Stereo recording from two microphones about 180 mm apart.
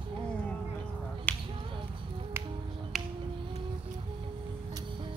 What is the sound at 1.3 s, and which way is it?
Finger snapping, 5° left (ahead or behind).